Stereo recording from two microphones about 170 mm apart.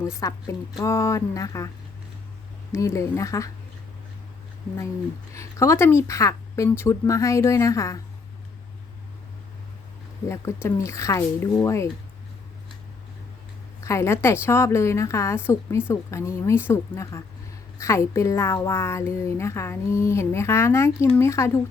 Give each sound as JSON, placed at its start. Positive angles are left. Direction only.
{"t": 0.2, "sound": "a woman's voice", "side_deg": 20}
{"t": 2.7, "sound": "speech", "side_deg": 15}
{"t": 5.3, "sound": "speech", "side_deg": 15}
{"t": 10.2, "sound": "speech", "side_deg": 15}
{"t": 13.8, "sound": "a woman's voice", "side_deg": 15}